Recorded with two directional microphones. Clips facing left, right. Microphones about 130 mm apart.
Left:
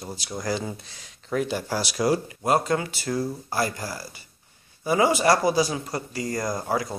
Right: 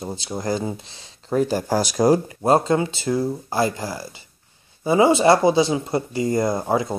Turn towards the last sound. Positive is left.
turn(degrees=-25)  # may be behind; listen again after turning